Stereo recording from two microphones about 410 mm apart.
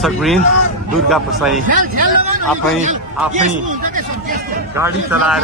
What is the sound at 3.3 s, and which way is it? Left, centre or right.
Speech, centre.